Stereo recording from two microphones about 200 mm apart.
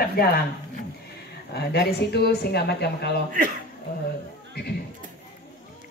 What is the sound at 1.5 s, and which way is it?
Speech, 55° left (ahead or behind).